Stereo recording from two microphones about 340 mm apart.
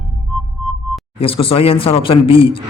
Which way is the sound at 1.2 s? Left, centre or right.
Centre.